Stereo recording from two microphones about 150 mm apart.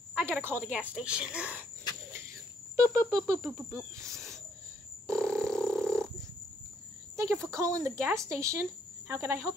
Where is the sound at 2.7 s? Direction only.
20° right (ahead or behind).